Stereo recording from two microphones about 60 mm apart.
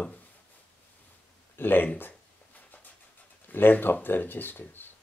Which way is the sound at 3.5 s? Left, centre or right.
Left.